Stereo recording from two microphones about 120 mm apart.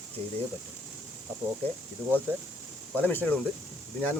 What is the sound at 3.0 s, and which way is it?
Speech, 15° left (ahead or behind).